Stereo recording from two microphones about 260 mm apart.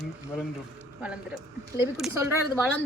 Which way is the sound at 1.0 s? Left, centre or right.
Centre.